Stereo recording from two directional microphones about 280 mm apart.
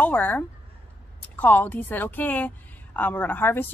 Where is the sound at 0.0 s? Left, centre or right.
Centre.